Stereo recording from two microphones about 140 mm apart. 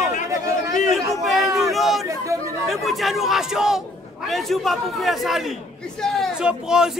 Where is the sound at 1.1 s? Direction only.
Centre (ahead or behind).